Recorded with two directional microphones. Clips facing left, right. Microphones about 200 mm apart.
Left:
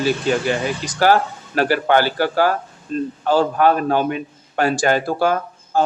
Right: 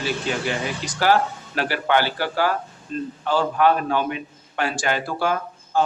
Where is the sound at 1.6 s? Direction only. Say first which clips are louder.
Left 5 dB; 45° left (ahead or behind).